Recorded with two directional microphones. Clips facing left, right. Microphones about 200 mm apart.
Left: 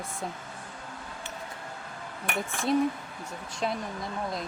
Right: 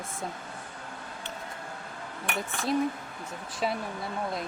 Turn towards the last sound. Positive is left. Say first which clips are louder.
# right 1 dB
turn(degrees=-5)  # may be behind; listen again after turning